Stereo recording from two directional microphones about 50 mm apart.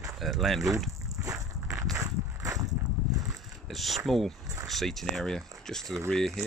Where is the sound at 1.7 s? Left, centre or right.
Right.